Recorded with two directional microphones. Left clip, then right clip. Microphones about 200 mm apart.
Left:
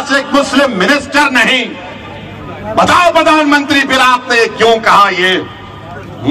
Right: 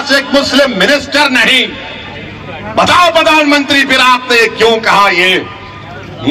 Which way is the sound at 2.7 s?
35° right (ahead or behind).